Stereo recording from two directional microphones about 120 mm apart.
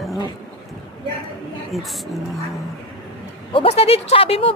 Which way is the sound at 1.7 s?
Centre (ahead or behind).